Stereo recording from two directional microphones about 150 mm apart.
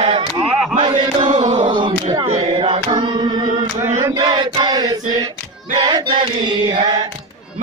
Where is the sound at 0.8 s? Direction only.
30° right (ahead or behind).